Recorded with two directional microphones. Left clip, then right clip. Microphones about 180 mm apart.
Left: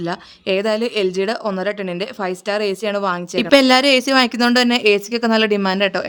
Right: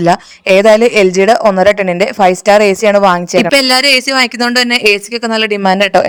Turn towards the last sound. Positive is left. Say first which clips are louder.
# right 10 dB
turn(degrees=-30)  # may be behind; listen again after turning